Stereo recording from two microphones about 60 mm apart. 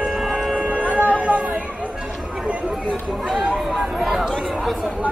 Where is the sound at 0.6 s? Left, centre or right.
Right.